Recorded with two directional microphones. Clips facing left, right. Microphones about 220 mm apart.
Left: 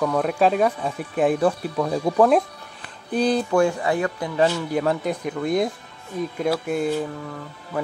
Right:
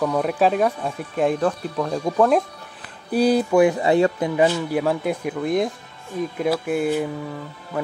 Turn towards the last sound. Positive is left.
turn(degrees=0)  # may be behind; listen again after turning